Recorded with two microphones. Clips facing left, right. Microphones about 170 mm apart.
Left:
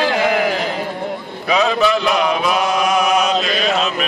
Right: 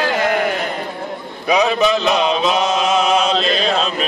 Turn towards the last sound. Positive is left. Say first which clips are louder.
# right 1 dB
turn(degrees=-30)  # may be behind; listen again after turning